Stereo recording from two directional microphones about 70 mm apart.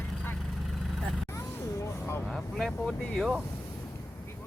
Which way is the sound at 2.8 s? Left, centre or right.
Centre.